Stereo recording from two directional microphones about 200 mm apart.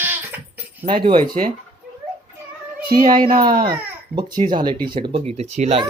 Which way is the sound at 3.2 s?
20° right (ahead or behind).